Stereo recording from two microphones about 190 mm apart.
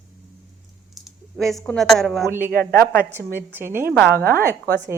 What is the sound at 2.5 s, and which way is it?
Speech, 55° right (ahead or behind).